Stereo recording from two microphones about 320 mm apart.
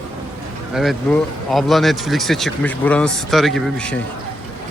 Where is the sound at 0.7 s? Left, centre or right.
Centre.